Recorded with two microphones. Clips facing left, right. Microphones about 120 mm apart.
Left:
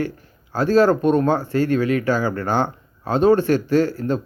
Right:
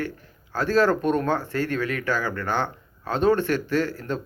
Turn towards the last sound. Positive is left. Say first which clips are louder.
# left 6 dB
turn(degrees=30)  # may be behind; listen again after turning